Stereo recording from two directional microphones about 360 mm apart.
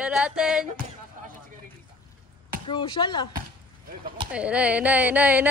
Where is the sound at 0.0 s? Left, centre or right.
Centre.